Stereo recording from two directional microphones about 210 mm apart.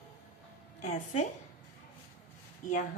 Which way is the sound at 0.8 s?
35° left (ahead or behind).